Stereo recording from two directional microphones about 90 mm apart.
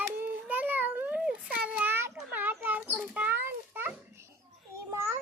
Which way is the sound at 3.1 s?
20° right (ahead or behind).